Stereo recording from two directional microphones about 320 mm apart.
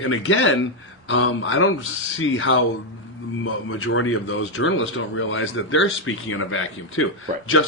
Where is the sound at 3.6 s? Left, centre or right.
Left.